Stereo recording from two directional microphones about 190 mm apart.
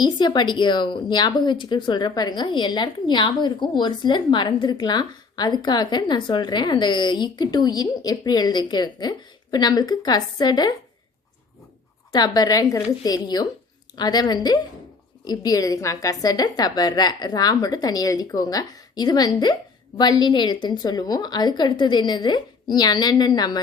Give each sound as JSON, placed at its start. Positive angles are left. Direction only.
{"t": 0.0, "sound": "speech", "side_deg": 25}
{"t": 12.1, "sound": "speech", "side_deg": 20}